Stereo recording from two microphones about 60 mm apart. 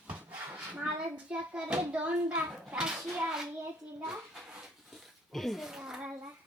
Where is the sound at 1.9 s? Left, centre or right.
Right.